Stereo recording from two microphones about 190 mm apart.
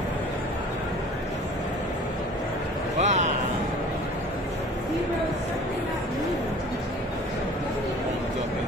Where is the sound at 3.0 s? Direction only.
40° right (ahead or behind).